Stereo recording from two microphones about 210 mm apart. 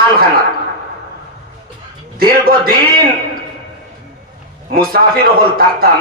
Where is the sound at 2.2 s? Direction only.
45° right (ahead or behind).